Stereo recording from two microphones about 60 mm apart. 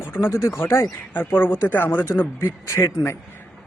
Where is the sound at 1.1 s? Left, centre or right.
Left.